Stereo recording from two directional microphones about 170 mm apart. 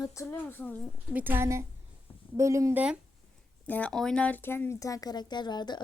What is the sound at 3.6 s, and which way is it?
Speech, 10° left (ahead or behind).